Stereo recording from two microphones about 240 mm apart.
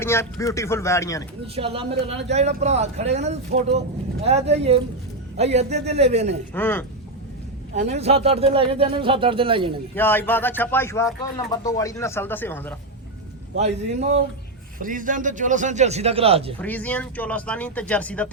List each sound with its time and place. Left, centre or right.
0.0 s speech: centre
1.5 s speech: right
6.5 s speech: centre
7.8 s speech: right
9.9 s speech: centre
13.6 s a man's voice: right
16.6 s speech: centre